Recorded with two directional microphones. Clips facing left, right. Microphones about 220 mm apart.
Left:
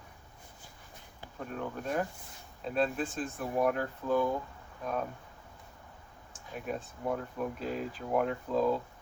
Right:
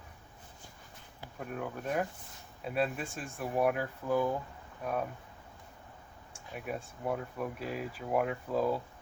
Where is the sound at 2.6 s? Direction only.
10° right (ahead or behind).